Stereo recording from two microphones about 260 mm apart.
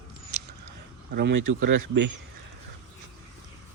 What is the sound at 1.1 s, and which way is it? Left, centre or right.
Speech, right.